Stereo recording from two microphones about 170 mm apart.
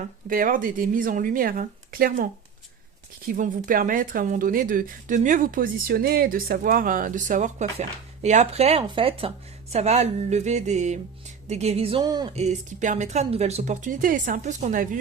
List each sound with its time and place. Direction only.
0.0 s a woman's voice: 55° right (ahead or behind); by 12.3 s 25° right (ahead or behind)
12.4 s speech: 45° right (ahead or behind)